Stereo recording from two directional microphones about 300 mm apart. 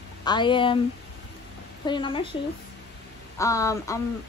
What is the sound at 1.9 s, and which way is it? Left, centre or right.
Speech, centre.